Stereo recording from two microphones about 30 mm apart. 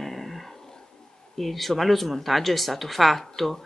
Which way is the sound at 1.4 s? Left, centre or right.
Centre.